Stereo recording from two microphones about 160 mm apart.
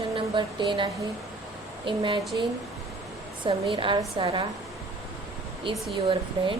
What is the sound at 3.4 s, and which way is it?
Speech, 30° right (ahead or behind).